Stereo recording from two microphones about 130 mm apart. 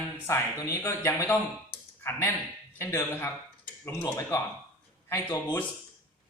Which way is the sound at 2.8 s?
25° left (ahead or behind).